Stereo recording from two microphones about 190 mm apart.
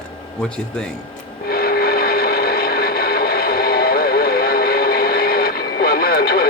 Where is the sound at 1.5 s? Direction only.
55° left (ahead or behind).